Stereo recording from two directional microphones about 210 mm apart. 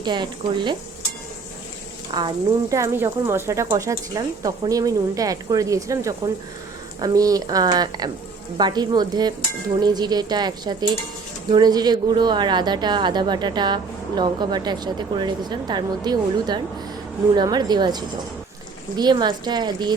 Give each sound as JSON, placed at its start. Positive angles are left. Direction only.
{"t": 0.0, "sound": "a woman's voice", "side_deg": -20}
{"t": 2.1, "sound": "a woman's voice", "side_deg": -15}